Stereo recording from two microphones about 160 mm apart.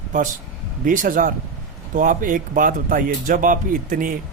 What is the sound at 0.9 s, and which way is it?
Speech, 55° right (ahead or behind).